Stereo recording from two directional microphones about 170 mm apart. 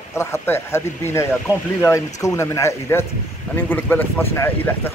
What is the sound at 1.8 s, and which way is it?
Speech, 20° left (ahead or behind).